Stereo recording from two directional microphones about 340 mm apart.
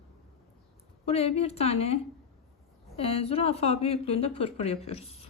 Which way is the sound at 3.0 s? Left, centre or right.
Centre.